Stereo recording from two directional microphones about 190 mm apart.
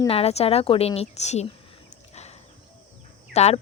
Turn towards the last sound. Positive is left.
turn(degrees=35)  # may be behind; listen again after turning